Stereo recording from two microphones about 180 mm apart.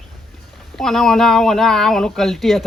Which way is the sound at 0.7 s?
Centre (ahead or behind).